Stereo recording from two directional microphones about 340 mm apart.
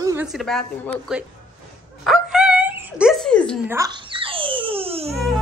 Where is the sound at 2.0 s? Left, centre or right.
Centre.